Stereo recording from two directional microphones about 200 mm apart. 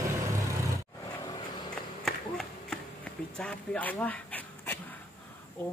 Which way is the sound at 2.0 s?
Centre (ahead or behind).